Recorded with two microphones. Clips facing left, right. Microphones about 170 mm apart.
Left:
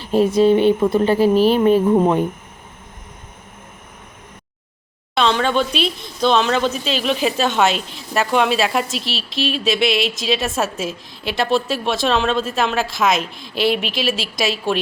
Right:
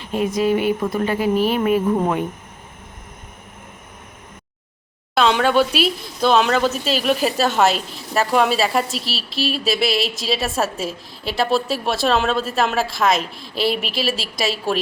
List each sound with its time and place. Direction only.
0.0 s speech: 30° left (ahead or behind)
5.1 s speech: 5° right (ahead or behind)